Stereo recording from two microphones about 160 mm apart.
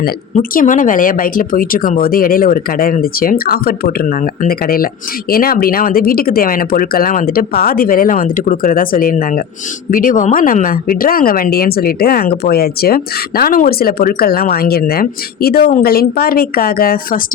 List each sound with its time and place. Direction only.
0.3 s speech: 55° left (ahead or behind)